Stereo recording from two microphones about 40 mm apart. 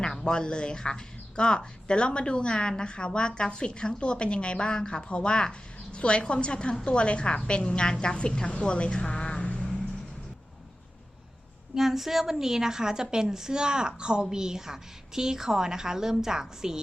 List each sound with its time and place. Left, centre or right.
0.2 s speech: left
8.6 s vehicle: left
11.7 s a woman's voice: centre